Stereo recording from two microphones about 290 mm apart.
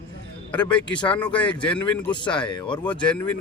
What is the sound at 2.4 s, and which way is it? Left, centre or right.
Speech, centre.